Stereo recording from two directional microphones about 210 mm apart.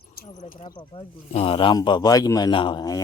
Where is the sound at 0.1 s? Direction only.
40° left (ahead or behind).